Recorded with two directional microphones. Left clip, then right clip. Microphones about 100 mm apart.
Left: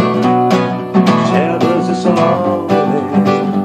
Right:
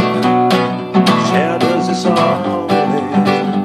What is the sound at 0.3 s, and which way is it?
Music, 25° right (ahead or behind).